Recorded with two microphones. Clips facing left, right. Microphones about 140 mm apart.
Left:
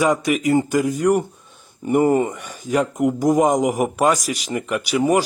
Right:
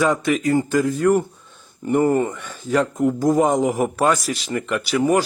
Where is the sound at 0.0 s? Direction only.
10° left (ahead or behind).